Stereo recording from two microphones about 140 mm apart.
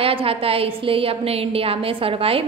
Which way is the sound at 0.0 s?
40° right (ahead or behind).